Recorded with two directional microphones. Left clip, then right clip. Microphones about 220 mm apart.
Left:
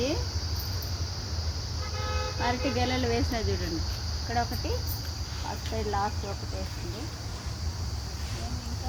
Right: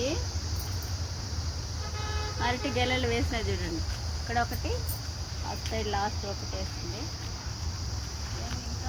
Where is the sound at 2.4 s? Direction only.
30° left (ahead or behind).